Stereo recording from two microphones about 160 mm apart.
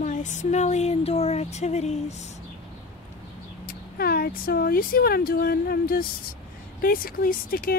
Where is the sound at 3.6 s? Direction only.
70° left (ahead or behind).